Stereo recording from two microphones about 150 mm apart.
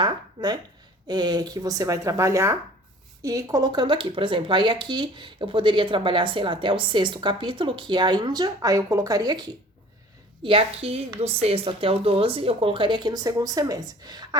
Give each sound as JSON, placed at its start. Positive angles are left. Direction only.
{"t": 0.0, "sound": "speech", "side_deg": -30}
{"t": 10.4, "sound": "speech", "side_deg": -40}